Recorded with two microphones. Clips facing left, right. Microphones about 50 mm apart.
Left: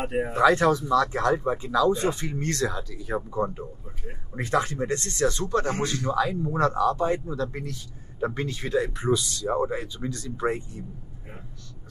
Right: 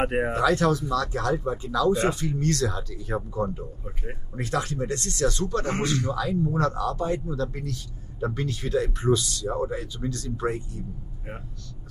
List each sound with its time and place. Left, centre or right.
0.1 s speech: right
0.4 s speech: left
2.7 s speech: centre
3.3 s speech: left
8.7 s speech: centre
9.2 s speech: left